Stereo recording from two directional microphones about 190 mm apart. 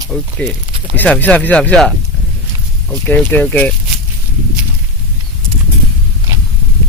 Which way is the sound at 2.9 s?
10° left (ahead or behind).